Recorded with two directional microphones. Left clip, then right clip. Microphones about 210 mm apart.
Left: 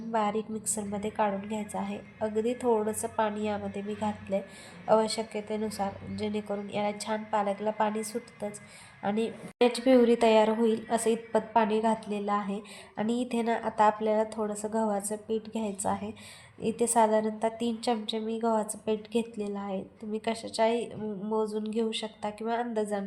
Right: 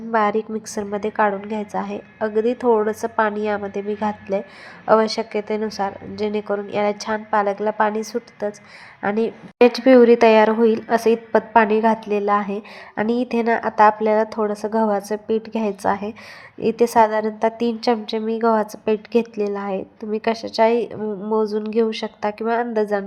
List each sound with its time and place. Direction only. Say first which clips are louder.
0.1 s a woman's voice: right 10 dB; 25° right (ahead or behind)